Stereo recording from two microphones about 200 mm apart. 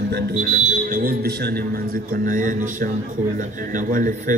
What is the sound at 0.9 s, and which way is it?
A man's voice, 50° right (ahead or behind).